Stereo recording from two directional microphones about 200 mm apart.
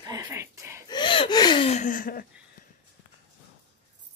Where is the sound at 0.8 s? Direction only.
25° left (ahead or behind); by 2.2 s 45° left (ahead or behind).